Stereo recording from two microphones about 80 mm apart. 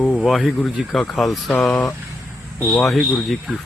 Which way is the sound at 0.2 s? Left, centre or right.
Centre.